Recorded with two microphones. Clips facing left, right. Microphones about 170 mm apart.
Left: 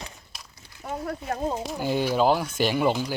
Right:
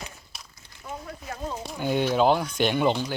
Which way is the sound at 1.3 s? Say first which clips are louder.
Left 4 dB; 35° left (ahead or behind).